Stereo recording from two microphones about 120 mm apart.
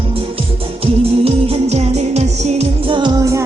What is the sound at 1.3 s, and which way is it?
Music, 60° right (ahead or behind).